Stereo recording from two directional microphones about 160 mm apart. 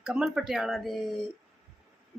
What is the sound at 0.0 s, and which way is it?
Speech, 5° right (ahead or behind).